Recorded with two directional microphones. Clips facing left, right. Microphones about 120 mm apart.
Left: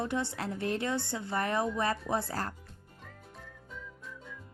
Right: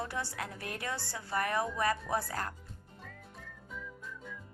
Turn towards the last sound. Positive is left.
turn(degrees=0)  # may be behind; listen again after turning